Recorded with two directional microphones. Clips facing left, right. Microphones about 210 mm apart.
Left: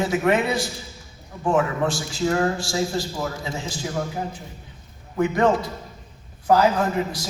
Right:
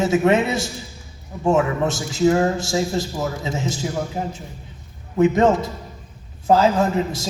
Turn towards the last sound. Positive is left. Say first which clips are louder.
# right 3 dB
turn(degrees=-25)  # may be behind; listen again after turning